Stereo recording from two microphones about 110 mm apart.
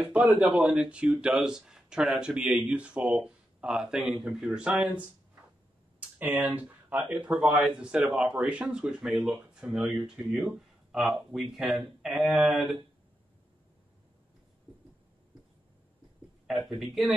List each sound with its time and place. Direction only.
0.0 s speech: 10° right (ahead or behind)
5.9 s a sound: 15° right (ahead or behind)
6.5 s speech: 15° right (ahead or behind)
16.4 s speech: centre (ahead or behind)